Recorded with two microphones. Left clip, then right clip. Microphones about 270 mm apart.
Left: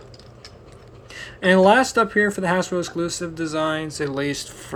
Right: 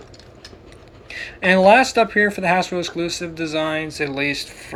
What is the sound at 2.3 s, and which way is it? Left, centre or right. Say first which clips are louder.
Speech: right 3 dB; left.